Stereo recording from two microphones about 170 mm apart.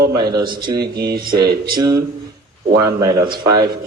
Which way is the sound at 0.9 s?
65° right (ahead or behind).